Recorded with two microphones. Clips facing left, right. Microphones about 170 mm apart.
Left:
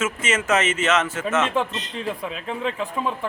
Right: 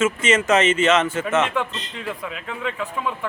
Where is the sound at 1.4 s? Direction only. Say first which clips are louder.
Left 2 dB; 30° left (ahead or behind).